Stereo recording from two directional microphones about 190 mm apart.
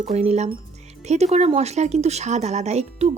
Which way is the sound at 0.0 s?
35° right (ahead or behind).